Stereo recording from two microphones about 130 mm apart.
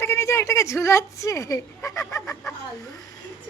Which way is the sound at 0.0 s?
20° left (ahead or behind).